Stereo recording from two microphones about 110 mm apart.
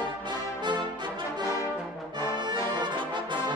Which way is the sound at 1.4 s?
30° left (ahead or behind).